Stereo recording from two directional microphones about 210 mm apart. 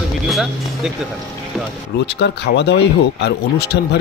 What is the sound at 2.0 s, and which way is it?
Speech, 55° left (ahead or behind).